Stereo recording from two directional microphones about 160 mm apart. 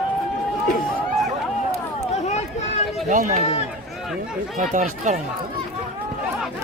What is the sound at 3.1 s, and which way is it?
Speech, 55° right (ahead or behind).